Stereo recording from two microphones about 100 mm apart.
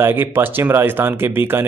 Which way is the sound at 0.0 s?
20° right (ahead or behind).